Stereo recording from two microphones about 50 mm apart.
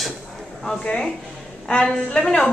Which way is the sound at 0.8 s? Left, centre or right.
Centre.